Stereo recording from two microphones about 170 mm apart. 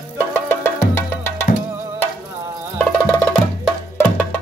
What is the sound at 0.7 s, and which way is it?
Music, 15° left (ahead or behind).